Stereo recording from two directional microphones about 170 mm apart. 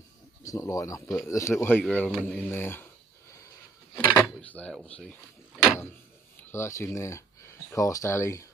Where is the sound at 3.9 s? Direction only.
10° left (ahead or behind).